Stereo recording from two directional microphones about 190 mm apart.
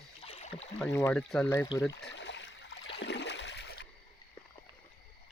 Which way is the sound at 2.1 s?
70° left (ahead or behind).